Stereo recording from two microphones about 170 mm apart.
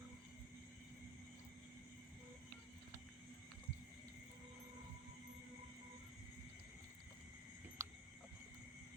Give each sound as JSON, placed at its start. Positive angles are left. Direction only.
{"t": 7.8, "sound": "cricket", "side_deg": -15}